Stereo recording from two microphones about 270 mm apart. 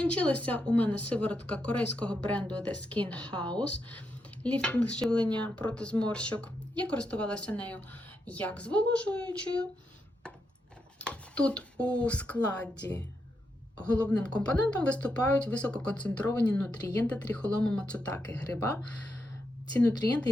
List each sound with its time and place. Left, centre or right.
0.0 s speech: centre
10.9 s speech: centre